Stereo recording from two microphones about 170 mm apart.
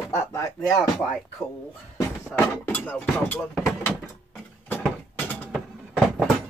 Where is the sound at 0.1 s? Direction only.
15° left (ahead or behind).